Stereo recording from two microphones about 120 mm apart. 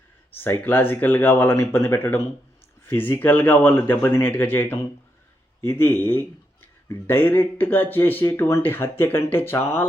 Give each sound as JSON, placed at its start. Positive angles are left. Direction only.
{"t": 0.3, "sound": "speech", "side_deg": 20}